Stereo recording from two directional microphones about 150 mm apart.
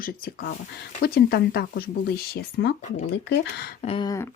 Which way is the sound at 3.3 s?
90° left.